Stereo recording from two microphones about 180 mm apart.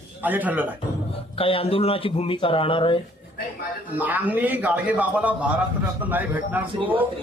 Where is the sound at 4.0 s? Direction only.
10° right (ahead or behind).